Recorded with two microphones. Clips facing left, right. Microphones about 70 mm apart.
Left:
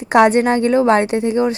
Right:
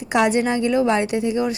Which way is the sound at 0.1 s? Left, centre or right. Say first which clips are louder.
Left 6 dB; left.